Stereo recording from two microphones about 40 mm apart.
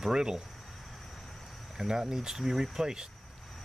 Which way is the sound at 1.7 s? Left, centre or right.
Centre.